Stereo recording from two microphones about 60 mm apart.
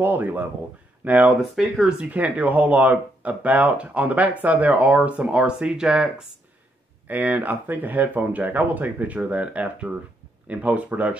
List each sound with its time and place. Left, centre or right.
0.0 s speech: right
1.4 s speech: centre
2.0 s speech: right
7.1 s speech: right